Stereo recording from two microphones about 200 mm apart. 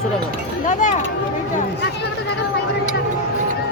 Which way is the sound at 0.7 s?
40° left (ahead or behind).